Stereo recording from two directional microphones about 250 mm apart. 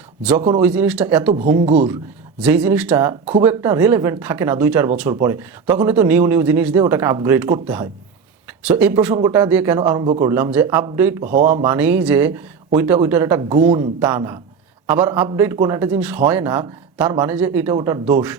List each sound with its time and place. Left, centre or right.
0.6 s speech: centre
1.6 s speech: right
2.4 s speech: centre
11.2 s speech: right
11.5 s speech: centre
17.7 s speech: centre